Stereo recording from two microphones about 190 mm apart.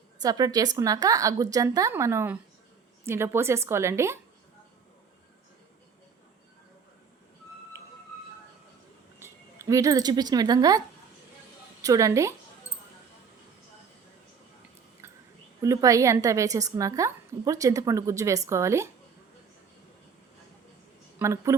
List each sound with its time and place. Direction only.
0.2 s a woman's voice: 20° right (ahead or behind)
9.1 s a woman's voice: 15° right (ahead or behind)
15.6 s a woman's voice: 15° right (ahead or behind)
21.2 s a woman's voice: 15° right (ahead or behind)